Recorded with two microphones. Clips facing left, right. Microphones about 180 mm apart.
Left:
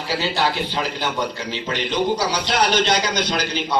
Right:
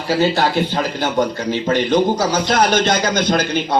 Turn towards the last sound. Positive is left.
turn(degrees=-50)  # may be behind; listen again after turning